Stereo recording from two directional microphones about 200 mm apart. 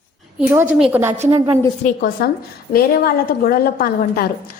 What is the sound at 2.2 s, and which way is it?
A woman's voice, 50° left (ahead or behind).